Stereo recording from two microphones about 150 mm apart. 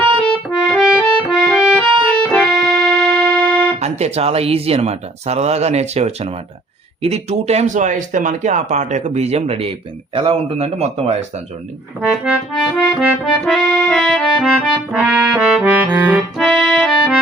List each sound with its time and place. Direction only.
0.7 s music: centre (ahead or behind)
3.8 s speech: 45° right (ahead or behind)
11.9 s accordion: 5° right (ahead or behind)
13.4 s music: centre (ahead or behind)
16.4 s accordion: centre (ahead or behind)